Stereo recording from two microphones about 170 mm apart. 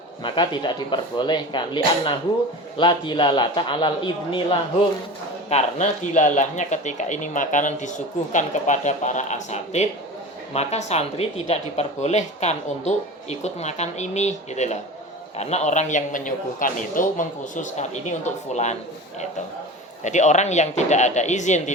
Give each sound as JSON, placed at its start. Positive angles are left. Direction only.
{"t": 0.2, "sound": "speech", "side_deg": 30}
{"t": 5.5, "sound": "speech", "side_deg": 40}
{"t": 20.1, "sound": "speech", "side_deg": 45}